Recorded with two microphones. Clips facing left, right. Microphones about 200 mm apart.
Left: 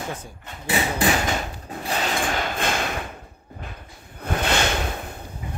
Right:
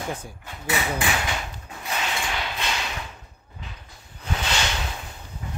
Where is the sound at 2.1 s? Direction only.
50° left (ahead or behind).